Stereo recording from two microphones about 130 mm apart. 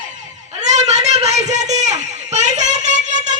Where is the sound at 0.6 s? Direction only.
65° right (ahead or behind).